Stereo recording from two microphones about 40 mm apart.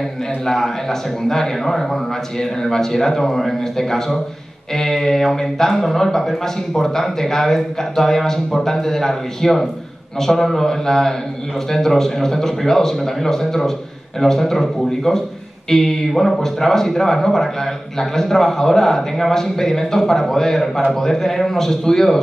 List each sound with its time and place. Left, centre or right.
0.5 s speech: centre